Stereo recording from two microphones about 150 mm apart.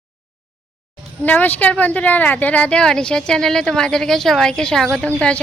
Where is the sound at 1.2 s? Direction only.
10° left (ahead or behind).